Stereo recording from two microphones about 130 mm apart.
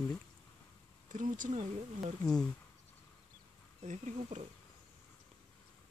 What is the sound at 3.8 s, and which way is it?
Speech, 65° right (ahead or behind).